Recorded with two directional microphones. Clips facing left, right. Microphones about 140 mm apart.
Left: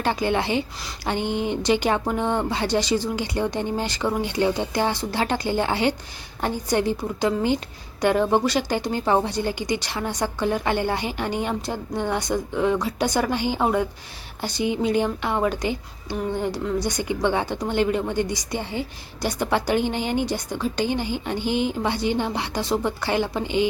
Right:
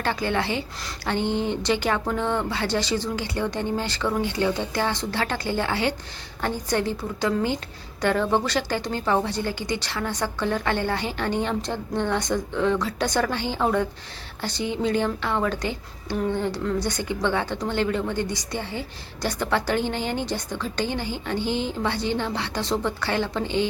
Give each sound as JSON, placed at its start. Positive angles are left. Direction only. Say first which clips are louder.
{"t": 0.0, "sound": "a woman's voice", "louder": "left 2 dB", "side_deg": 15}